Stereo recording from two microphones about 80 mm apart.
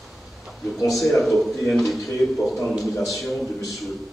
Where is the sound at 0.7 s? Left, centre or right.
Centre.